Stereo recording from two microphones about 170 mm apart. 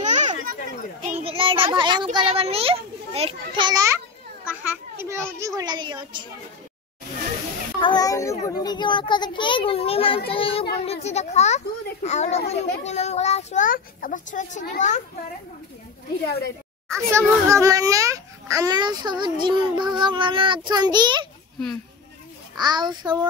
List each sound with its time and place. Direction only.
0.0 s children playing: 45° right (ahead or behind)
1.2 s a child's voice: 30° right (ahead or behind)
7.8 s a child's voice: 25° left (ahead or behind); by 15.0 s 45° left (ahead or behind)
16.3 s a woman's voice: 70° left (ahead or behind)
17.1 s a child's voice: 15° right (ahead or behind)
22.6 s a child's voice: 25° right (ahead or behind)